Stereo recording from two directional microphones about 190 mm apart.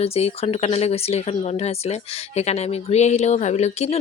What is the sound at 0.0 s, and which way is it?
Speech, 30° left (ahead or behind).